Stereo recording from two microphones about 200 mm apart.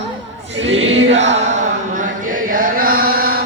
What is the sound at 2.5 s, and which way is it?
Chant, 45° right (ahead or behind).